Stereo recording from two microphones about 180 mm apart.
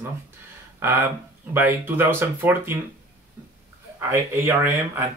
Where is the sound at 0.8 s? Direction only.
10° right (ahead or behind).